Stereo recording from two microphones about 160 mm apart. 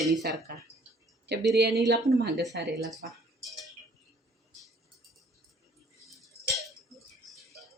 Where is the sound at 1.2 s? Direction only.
90° right.